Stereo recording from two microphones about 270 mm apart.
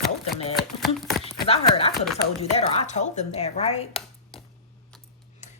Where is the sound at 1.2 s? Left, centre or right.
Left.